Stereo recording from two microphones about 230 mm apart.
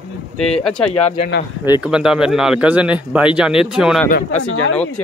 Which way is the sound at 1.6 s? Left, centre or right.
Centre.